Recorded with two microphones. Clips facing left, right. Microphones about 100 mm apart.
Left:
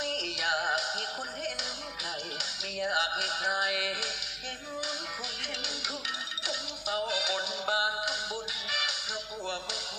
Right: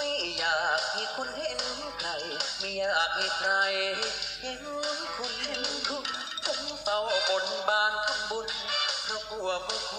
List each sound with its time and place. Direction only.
0.0 s music: 55° right (ahead or behind)
2.7 s a sound: 50° right (ahead or behind)
6.5 s music: 50° right (ahead or behind)